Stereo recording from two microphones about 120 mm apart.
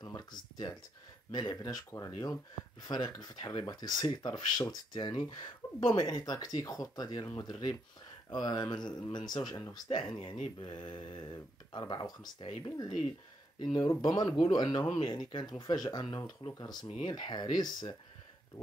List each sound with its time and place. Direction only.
0.0 s a sound: 35° left (ahead or behind)
1.3 s speech: 30° left (ahead or behind)
16.4 s speech: 55° left (ahead or behind)
17.0 s speech: 40° left (ahead or behind)